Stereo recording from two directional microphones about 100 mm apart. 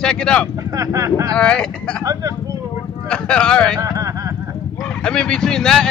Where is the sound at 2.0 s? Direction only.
35° right (ahead or behind).